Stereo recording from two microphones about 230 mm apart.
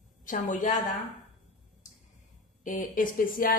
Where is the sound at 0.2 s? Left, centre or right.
Left.